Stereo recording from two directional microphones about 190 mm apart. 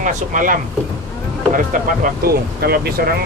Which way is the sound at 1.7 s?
45° right (ahead or behind).